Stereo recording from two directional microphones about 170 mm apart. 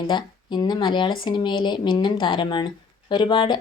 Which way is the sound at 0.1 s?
25° left (ahead or behind).